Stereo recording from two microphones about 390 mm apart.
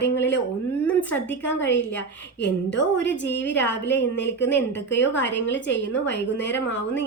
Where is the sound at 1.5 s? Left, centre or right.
Left.